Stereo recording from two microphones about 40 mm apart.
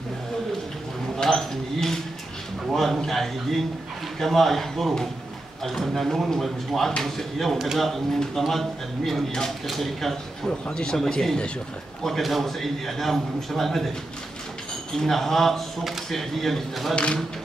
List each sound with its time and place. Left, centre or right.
1.1 s a sound: centre
4.2 s speech: centre
7.5 s speech: centre
8.2 s speech: centre
10.7 s speech: centre
12.0 s speech: centre
15.0 s speech: centre
16.9 s speech: left